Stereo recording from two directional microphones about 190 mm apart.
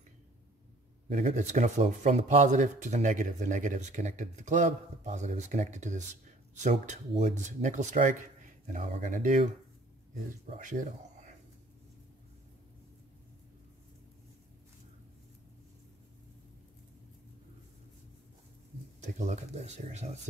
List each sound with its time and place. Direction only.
1.0 s speech: 35° right (ahead or behind)
10.6 s speech: 40° right (ahead or behind)
18.9 s speech: 40° right (ahead or behind)